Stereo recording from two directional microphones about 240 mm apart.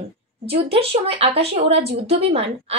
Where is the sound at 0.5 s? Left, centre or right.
Right.